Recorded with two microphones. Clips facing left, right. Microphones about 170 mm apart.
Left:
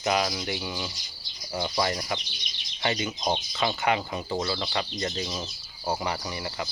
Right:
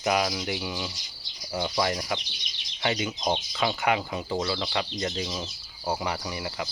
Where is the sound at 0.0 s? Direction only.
5° right (ahead or behind).